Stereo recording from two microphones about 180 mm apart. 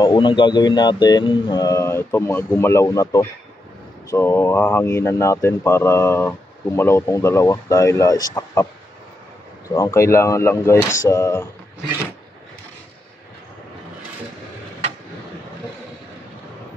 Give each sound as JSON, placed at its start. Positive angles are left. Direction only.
{"t": 0.0, "sound": "speech", "side_deg": 25}
{"t": 9.8, "sound": "speech", "side_deg": 15}